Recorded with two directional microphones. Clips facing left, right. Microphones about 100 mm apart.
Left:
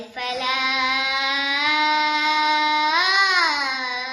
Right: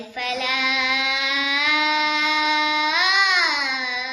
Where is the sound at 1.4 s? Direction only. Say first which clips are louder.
Left 1 dB; 30° left (ahead or behind).